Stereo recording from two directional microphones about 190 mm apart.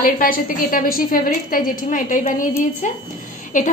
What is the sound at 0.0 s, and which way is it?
A woman's voice, 50° left (ahead or behind).